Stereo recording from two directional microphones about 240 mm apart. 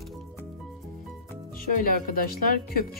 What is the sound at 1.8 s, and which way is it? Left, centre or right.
Speech, left.